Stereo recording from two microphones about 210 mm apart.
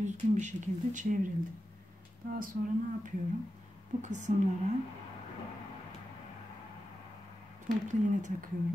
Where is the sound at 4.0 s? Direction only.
35° right (ahead or behind).